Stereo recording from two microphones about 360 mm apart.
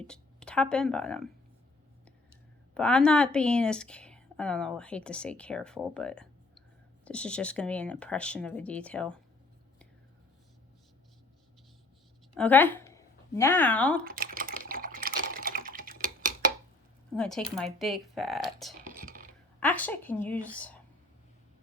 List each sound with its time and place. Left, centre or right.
0.1 s speech: centre
2.7 s a woman's voice: centre
12.4 s speech: centre
14.0 s typing: right
17.2 s a woman's voice: centre
18.9 s a sound: right
19.5 s a woman's voice: centre